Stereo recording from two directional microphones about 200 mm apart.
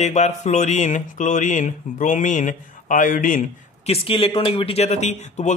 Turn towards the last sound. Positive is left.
turn(degrees=35)  # may be behind; listen again after turning